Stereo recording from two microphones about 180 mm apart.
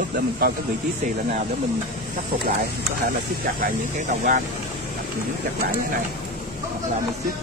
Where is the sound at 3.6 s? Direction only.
45° right (ahead or behind).